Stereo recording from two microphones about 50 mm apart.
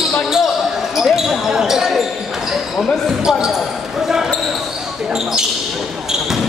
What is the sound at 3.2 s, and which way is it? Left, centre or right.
Speech, centre.